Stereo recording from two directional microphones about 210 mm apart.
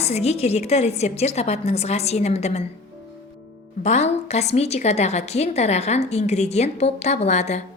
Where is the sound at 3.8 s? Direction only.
35° left (ahead or behind).